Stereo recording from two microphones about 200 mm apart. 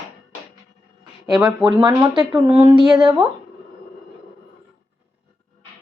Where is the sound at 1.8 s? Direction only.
15° right (ahead or behind).